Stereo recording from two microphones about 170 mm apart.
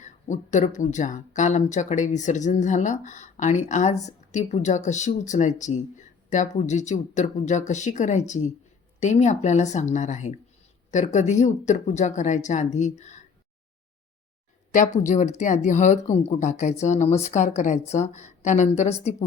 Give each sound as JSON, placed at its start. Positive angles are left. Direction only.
{"t": 0.0, "sound": "speech", "side_deg": 45}
{"t": 14.7, "sound": "speech", "side_deg": 45}